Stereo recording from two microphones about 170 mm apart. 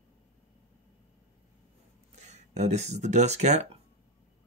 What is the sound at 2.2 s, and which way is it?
Speech, 40° right (ahead or behind).